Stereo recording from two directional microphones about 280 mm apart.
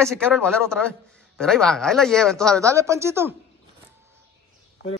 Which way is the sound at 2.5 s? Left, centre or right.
Centre.